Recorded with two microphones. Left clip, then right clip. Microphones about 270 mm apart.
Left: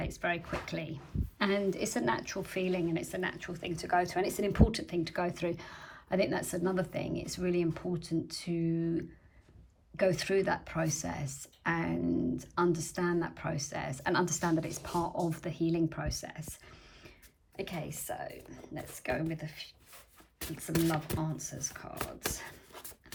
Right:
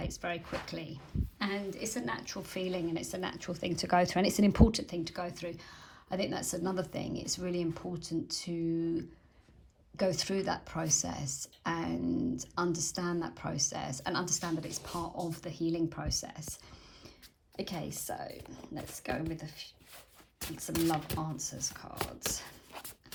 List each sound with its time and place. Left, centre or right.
0.0 s a woman's voice: centre
17.8 s a woman's voice: centre
21.1 s a woman's voice: centre